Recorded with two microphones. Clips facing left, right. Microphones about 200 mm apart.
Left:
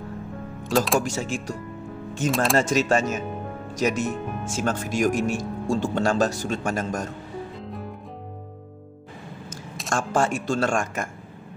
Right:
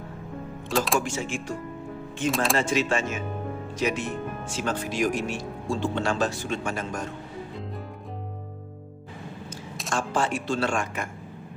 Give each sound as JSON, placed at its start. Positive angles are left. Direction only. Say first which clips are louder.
{"t": 0.7, "sound": "speech", "louder": "left 3 dB", "side_deg": 0}
{"t": 1.0, "sound": "speech", "louder": "left 2 dB", "side_deg": 40}
{"t": 9.8, "sound": "speech", "louder": "left 3 dB", "side_deg": 45}